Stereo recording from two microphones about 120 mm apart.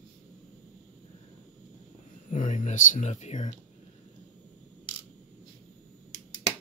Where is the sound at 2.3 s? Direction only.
90° left.